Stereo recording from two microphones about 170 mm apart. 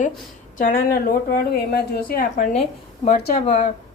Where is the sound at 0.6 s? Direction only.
55° left (ahead or behind).